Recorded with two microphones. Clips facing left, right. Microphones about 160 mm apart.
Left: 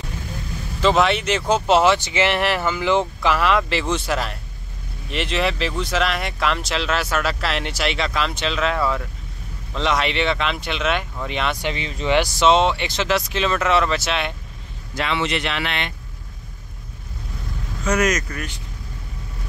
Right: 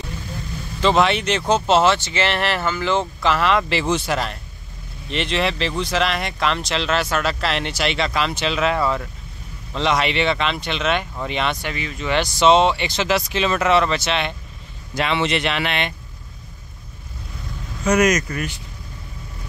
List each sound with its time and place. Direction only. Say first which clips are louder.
0.8 s speech: even; centre (ahead or behind)
11.6 s speech: left 2 dB; 25° left (ahead or behind)
12.4 s speech: right 5 dB; centre (ahead or behind)
15.0 s speech: right 2 dB; 25° right (ahead or behind)
17.8 s speech: right 3 dB; 15° right (ahead or behind)